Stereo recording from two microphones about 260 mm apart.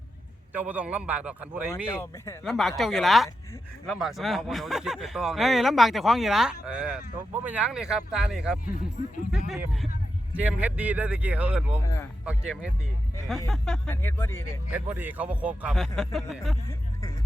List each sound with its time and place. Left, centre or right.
0.5 s speech: centre
1.9 s speech: centre
2.4 s speech: centre
8.7 s speech: left
9.5 s speech: centre
14.7 s speech: centre